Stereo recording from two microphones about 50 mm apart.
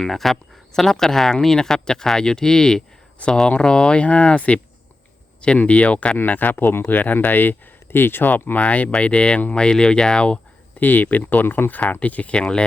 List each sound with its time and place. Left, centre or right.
0.0 s speech: centre; by 6.8 s left
6.8 s speech: left; by 10.4 s centre
10.8 s speech: left
11.8 s speech: left